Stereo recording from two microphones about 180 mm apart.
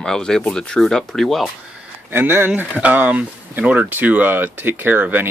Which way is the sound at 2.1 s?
10° right (ahead or behind).